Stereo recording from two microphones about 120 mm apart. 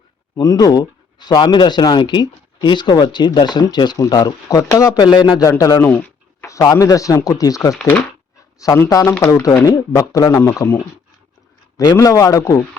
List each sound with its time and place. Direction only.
0.3 s speech: 30° left (ahead or behind)
5.1 s a man's voice: 45° left (ahead or behind)
5.4 s speech: 25° left (ahead or behind)
11.8 s speech: 30° left (ahead or behind)